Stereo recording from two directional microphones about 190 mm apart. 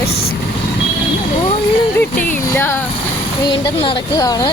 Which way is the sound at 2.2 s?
10° left (ahead or behind).